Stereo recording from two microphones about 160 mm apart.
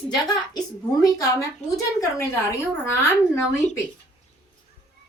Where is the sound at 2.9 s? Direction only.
15° left (ahead or behind).